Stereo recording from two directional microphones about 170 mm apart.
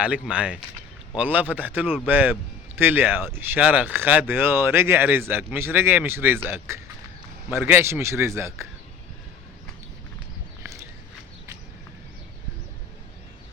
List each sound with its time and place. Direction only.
0.0 s a man's voice: 5° right (ahead or behind)